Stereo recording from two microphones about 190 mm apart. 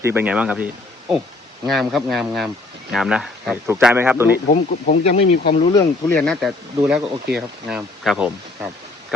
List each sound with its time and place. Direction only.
0.0 s speech: 10° right (ahead or behind)
4.4 s speech: 40° left (ahead or behind)
5.7 s speech: 5° left (ahead or behind)